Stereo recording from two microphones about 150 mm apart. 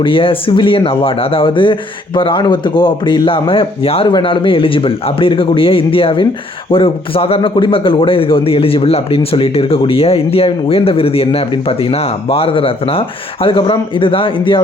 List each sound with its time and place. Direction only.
0.0 s a man's voice: 35° left (ahead or behind)